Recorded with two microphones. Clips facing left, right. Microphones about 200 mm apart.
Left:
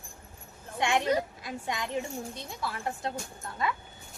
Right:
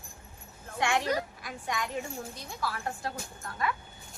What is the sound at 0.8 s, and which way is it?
A woman's voice, 20° left (ahead or behind).